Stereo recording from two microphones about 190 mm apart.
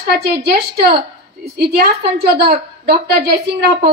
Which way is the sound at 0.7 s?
55° right (ahead or behind).